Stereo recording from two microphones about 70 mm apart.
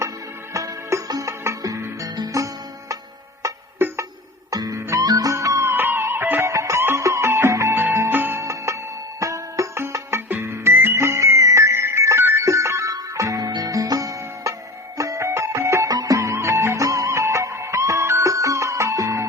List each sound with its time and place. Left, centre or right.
0.5 s music: right
3.4 s music: right
3.8 s music: right
4.5 s music: right
5.7 s music: right
6.4 s music: right
8.1 s music: right
8.4 s music: right